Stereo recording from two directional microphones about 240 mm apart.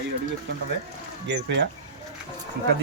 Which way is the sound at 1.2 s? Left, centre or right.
Right.